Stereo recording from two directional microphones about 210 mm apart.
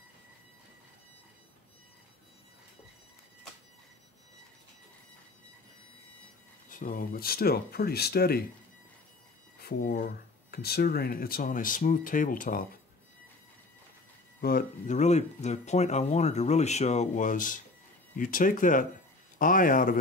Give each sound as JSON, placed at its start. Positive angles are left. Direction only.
{"t": 6.7, "sound": "speech", "side_deg": 40}
{"t": 9.6, "sound": "speech", "side_deg": 45}
{"t": 14.4, "sound": "speech", "side_deg": 40}